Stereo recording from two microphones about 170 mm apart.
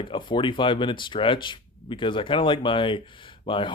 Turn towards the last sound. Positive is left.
turn(degrees=30)  # may be behind; listen again after turning